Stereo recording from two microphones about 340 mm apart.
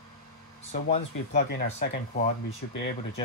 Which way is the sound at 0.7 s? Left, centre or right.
Left.